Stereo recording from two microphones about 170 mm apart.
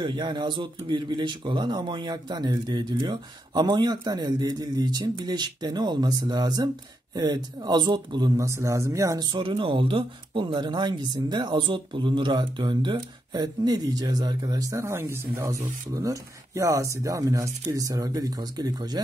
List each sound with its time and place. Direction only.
0.0 s speech: 25° right (ahead or behind)
9.3 s speech: 30° right (ahead or behind)